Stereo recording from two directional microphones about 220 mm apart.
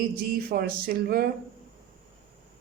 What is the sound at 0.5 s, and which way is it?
Speech, 45° right (ahead or behind).